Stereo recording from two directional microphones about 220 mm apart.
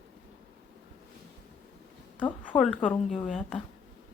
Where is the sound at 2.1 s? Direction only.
5° left (ahead or behind).